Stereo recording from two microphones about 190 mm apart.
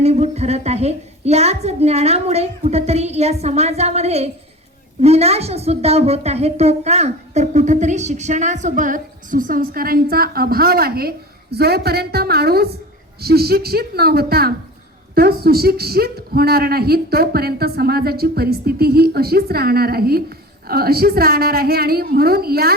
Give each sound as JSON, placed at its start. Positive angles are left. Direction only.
{"t": 0.0, "sound": "a woman's voice", "side_deg": -35}